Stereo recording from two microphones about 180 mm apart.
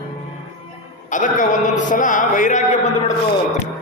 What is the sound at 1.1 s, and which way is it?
A man's voice, 45° left (ahead or behind).